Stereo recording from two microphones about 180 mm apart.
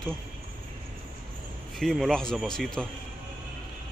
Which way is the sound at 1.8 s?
Centre (ahead or behind).